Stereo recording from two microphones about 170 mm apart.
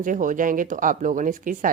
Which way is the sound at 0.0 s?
50° right (ahead or behind).